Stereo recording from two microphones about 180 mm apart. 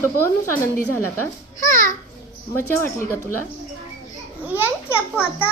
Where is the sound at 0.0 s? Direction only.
15° left (ahead or behind).